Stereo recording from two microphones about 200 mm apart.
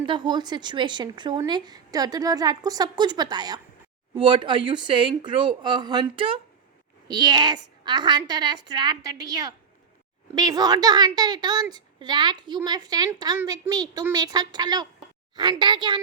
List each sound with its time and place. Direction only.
0.0 s a woman's voice: 25° right (ahead or behind)